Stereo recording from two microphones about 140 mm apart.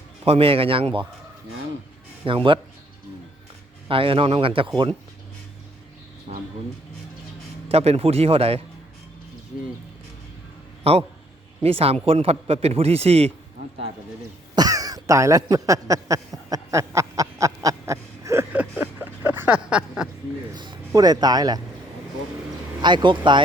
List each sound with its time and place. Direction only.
0.3 s a man's voice: 45° right (ahead or behind)
2.2 s speech: 35° right (ahead or behind)
3.8 s speech: 40° right (ahead or behind)
7.7 s a man's voice: 45° right (ahead or behind)
11.6 s a man's voice: 45° right (ahead or behind)
14.5 s a sound: 25° right (ahead or behind); by 20.1 s 5° right (ahead or behind)
20.6 s speech: 30° right (ahead or behind)
22.8 s speech: 30° right (ahead or behind)